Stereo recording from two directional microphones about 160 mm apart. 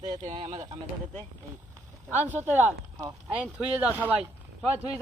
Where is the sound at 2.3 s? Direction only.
10° right (ahead or behind).